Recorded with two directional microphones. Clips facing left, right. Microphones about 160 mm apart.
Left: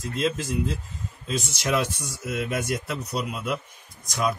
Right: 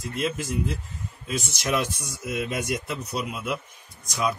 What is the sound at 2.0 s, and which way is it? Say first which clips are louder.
Speech: even; 5° right (ahead or behind).